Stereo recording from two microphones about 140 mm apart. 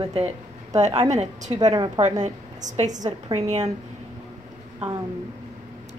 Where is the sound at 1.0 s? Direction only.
55° right (ahead or behind).